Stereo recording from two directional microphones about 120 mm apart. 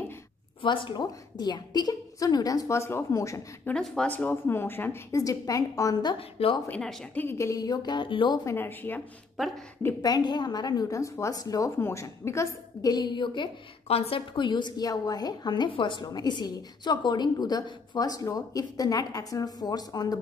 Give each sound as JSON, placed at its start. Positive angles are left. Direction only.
{"t": 0.6, "sound": "a woman's voice", "side_deg": 40}
{"t": 3.6, "sound": "a woman's voice", "side_deg": 5}
{"t": 6.1, "sound": "a woman's voice", "side_deg": 50}
{"t": 6.7, "sound": "speech", "side_deg": 5}
{"t": 7.2, "sound": "a woman's voice", "side_deg": 20}
{"t": 8.5, "sound": "speech", "side_deg": 15}
{"t": 10.0, "sound": "a woman's voice", "side_deg": 35}
{"t": 13.8, "sound": "a woman's voice", "side_deg": 55}